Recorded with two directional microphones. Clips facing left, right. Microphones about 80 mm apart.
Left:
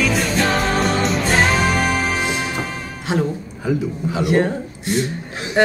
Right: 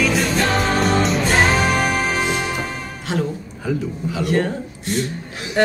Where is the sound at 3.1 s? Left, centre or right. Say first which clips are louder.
Left 3 dB; centre.